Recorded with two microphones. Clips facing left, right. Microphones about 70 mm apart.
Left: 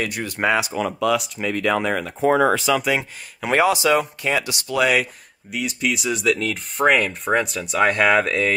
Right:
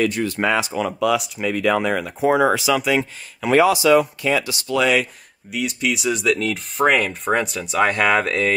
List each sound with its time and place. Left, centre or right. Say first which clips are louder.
0.2 s speech: right 1 dB; centre
0.6 s speech: right 1 dB; centre
3.3 s speech: right 3 dB; left
4.3 s speech: right 2 dB; left
4.7 s speech: right 1 dB; centre